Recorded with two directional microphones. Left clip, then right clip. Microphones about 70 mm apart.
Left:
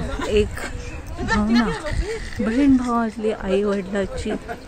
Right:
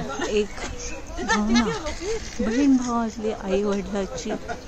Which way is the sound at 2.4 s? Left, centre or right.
Left.